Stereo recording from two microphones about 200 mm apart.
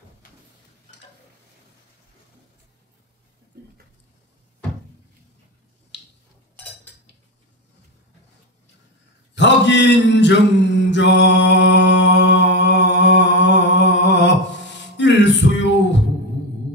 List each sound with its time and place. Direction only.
5.9 s a sound: 60° left (ahead or behind)
9.3 s mantra: 60° left (ahead or behind)
15.0 s music: 60° left (ahead or behind)